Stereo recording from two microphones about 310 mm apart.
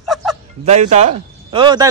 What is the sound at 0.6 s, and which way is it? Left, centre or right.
A man's voice, right.